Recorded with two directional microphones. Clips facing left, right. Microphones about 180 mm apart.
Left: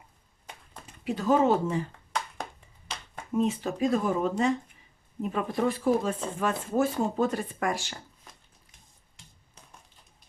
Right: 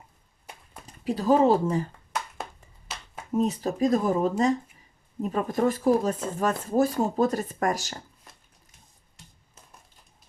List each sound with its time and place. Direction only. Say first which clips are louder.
0.9 s speech: right 3 dB; 35° right (ahead or behind)
2.1 s clapping: even; 5° right (ahead or behind)
3.3 s speech: right 2 dB; 40° right (ahead or behind)